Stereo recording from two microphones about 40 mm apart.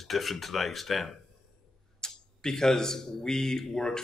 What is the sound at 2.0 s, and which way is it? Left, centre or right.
A man's voice, centre.